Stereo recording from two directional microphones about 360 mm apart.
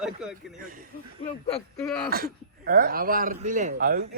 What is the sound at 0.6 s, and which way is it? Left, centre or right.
Speech, right.